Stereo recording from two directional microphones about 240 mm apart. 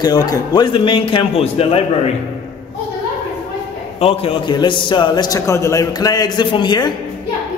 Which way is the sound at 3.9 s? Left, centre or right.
Left.